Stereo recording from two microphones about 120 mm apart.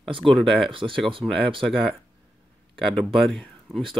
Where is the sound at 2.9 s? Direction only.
Centre (ahead or behind).